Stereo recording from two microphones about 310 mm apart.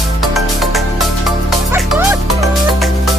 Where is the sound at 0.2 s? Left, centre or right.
Centre.